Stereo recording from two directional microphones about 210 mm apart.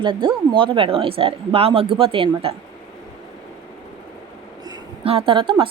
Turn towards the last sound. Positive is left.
turn(degrees=-25)  # may be behind; listen again after turning